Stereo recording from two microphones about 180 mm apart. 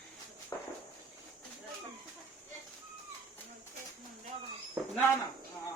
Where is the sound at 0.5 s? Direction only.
15° left (ahead or behind).